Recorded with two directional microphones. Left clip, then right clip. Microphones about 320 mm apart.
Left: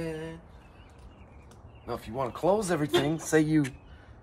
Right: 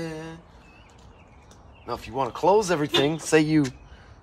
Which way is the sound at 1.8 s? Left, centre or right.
Right.